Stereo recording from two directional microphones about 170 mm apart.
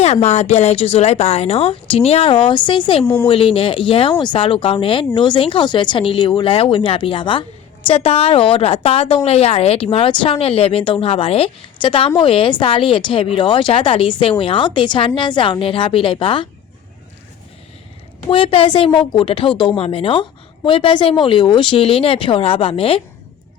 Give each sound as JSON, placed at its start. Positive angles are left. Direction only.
{"t": 0.0, "sound": "a woman's voice", "side_deg": 40}
{"t": 3.0, "sound": "a woman's voice", "side_deg": 15}
{"t": 3.2, "sound": "a woman's voice", "side_deg": 30}
{"t": 18.3, "sound": "a woman's voice", "side_deg": 30}